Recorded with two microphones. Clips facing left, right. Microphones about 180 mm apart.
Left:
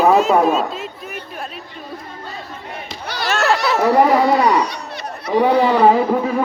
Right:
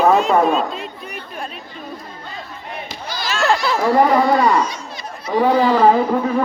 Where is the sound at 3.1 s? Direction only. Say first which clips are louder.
Left 4 dB; 65° left (ahead or behind).